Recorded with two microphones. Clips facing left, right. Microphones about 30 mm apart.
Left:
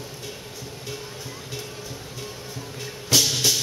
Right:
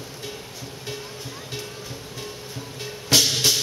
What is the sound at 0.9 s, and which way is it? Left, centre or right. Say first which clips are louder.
Music: right 1 dB; centre.